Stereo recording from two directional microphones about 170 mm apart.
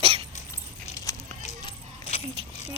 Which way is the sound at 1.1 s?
20° left (ahead or behind).